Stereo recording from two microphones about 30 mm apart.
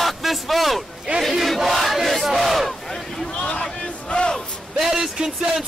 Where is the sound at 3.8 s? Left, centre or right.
Left.